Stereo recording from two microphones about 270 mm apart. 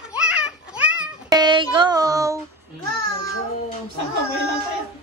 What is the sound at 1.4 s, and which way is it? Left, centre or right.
Music, centre.